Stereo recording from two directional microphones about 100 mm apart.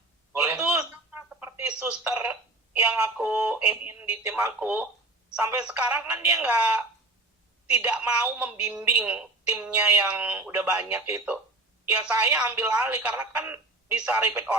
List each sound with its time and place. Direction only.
0.5 s telephone: 15° right (ahead or behind)
3.8 s speech: 20° right (ahead or behind)
5.5 s a woman's voice: 15° right (ahead or behind)